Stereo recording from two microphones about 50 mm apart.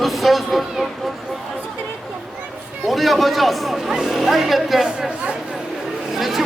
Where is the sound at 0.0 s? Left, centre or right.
Centre.